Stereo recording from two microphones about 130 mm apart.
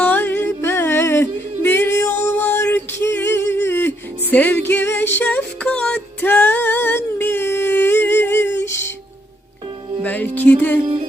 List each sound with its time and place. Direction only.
0.0 s music: 15° left (ahead or behind)
10.0 s music: 15° left (ahead or behind)